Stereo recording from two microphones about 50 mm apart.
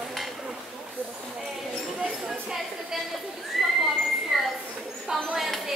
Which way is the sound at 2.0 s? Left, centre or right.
Centre.